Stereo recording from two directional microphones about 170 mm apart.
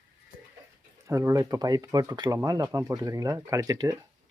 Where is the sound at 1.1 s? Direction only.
20° right (ahead or behind).